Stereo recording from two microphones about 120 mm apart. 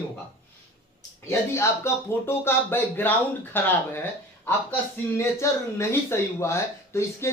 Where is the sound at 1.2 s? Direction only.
20° left (ahead or behind).